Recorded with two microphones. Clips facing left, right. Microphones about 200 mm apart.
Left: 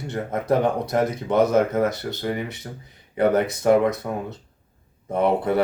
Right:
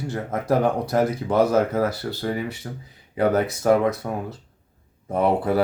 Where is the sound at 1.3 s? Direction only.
30° right (ahead or behind).